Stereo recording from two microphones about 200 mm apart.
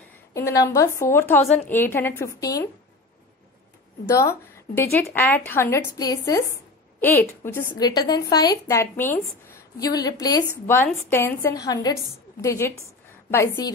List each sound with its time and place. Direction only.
0.3 s a woman's voice: 15° left (ahead or behind)
4.1 s a woman's voice: 15° left (ahead or behind)